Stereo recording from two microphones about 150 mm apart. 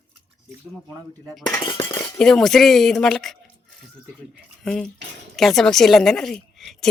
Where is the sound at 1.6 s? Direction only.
35° left (ahead or behind).